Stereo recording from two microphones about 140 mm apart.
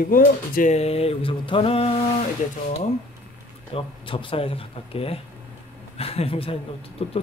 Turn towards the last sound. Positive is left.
turn(degrees=45)  # may be behind; listen again after turning